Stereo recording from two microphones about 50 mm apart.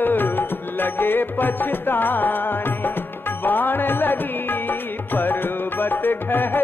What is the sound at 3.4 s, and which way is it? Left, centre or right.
Music, left.